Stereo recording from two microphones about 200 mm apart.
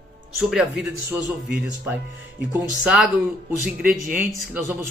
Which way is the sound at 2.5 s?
5° right (ahead or behind).